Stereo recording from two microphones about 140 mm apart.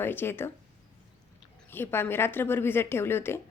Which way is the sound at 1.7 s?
15° left (ahead or behind).